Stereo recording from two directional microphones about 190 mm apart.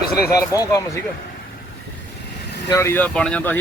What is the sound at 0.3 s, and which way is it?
Speech, 15° left (ahead or behind).